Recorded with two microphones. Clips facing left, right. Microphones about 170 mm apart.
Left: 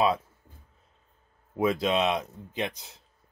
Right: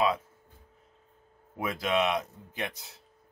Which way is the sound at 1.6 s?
25° left (ahead or behind).